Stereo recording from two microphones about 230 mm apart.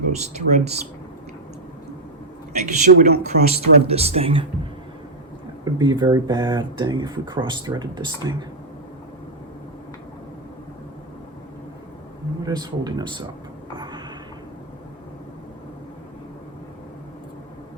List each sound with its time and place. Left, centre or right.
0.1 s speech: right
2.5 s speech: right
5.6 s speech: centre
12.5 s speech: centre
13.7 s a sound: centre